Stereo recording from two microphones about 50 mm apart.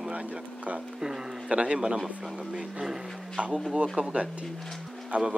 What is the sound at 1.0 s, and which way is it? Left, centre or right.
A man's voice, centre.